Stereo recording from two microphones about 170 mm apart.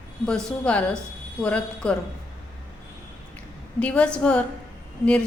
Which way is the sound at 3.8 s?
5° left (ahead or behind).